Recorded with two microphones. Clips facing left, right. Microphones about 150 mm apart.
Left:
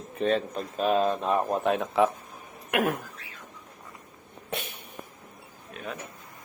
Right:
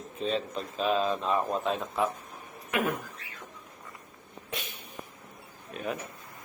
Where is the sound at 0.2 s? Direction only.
60° left (ahead or behind).